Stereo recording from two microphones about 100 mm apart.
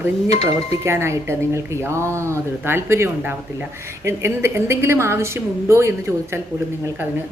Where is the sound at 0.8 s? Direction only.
25° right (ahead or behind).